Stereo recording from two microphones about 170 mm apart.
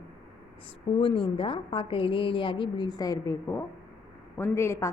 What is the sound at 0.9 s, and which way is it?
A woman's voice, 30° left (ahead or behind).